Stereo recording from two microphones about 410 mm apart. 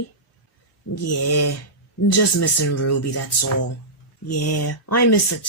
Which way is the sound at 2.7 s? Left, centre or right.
Left.